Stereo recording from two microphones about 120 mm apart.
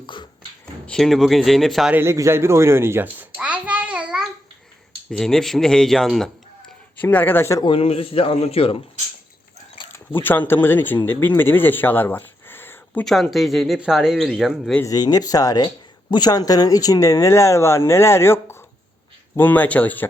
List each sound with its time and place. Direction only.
0.0 s finger snapping: 40° left (ahead or behind)
0.9 s speech: centre (ahead or behind)
1.9 s a sound: 20° right (ahead or behind)
5.1 s speech: 5° left (ahead or behind)
7.0 s speech: 15° left (ahead or behind)
7.6 s a man's voice: 50° left (ahead or behind)
9.9 s speech: 15° left (ahead or behind)
13.1 s speech: centre (ahead or behind)
14.8 s speech: 30° left (ahead or behind); by 20.1 s 15° left (ahead or behind)